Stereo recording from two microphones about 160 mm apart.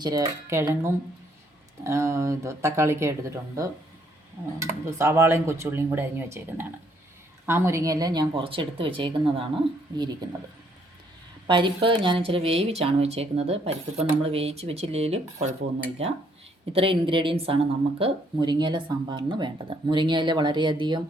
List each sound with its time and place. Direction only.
0.0 s speech: 20° right (ahead or behind)
4.9 s speech: 15° right (ahead or behind)
11.4 s a woman's voice: 30° right (ahead or behind)
16.7 s speech: 35° right (ahead or behind)